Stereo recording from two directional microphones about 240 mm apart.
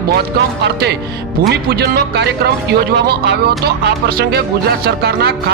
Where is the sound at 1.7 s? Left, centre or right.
Right.